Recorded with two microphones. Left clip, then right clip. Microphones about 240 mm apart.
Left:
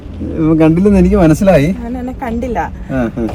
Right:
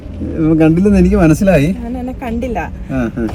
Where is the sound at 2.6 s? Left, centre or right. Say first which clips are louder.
Left 3 dB; left.